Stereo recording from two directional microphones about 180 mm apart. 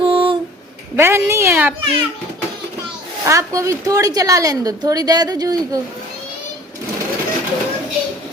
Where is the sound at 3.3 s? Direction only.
15° right (ahead or behind).